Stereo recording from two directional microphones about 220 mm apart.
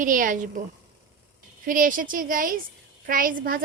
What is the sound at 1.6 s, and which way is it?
A woman's voice, 40° right (ahead or behind).